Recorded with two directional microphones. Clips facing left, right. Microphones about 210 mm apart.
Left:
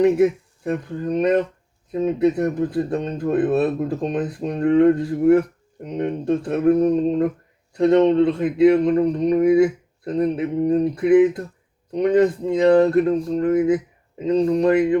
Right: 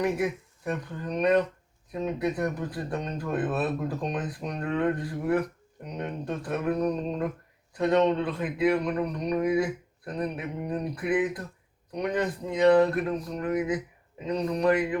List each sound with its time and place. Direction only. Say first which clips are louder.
0.0 s speech: left 11 dB; 30° left (ahead or behind)